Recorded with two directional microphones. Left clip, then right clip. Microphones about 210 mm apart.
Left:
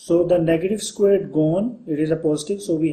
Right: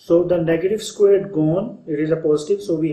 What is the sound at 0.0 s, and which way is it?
Speech, 50° left (ahead or behind).